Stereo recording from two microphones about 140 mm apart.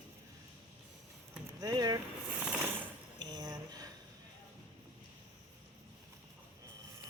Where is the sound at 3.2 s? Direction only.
30° right (ahead or behind).